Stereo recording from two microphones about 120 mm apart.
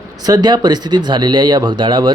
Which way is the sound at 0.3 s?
35° right (ahead or behind).